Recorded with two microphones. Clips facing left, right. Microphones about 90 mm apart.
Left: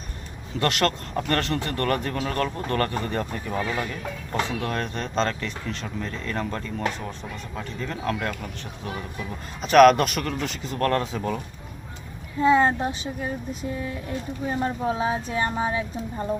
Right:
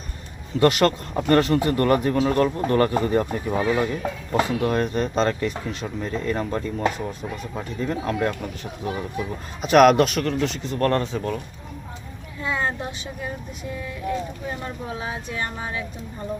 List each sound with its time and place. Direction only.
0.6 s speech: 5° right (ahead or behind)
4.3 s speech: 10° right (ahead or behind)
12.4 s speech: 30° left (ahead or behind)
14.8 s speech: 30° left (ahead or behind)